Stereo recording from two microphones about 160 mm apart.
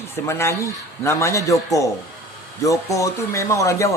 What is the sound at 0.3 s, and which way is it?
A man's voice, 15° left (ahead or behind).